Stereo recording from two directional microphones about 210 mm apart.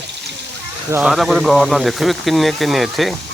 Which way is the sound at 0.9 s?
10° right (ahead or behind).